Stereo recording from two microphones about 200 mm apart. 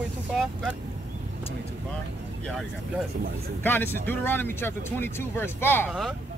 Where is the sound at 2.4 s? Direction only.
Centre (ahead or behind).